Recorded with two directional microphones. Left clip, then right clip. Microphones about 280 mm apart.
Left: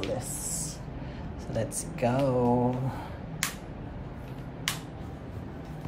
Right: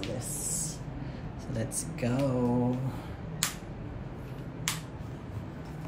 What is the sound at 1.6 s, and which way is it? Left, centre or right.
Speech, centre.